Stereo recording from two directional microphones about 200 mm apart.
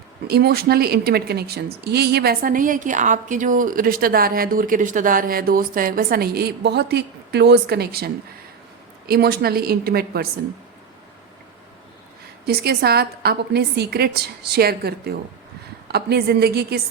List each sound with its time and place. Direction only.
0.3 s a woman's voice: 50° right (ahead or behind)
12.5 s a woman's voice: 55° right (ahead or behind)